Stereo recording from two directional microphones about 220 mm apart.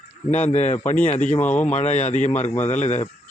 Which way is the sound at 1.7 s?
30° left (ahead or behind).